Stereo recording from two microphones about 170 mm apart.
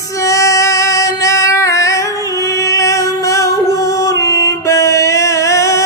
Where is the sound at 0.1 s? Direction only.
20° left (ahead or behind).